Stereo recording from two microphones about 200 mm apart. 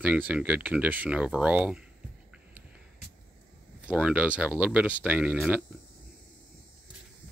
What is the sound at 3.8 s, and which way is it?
Speech, 5° right (ahead or behind).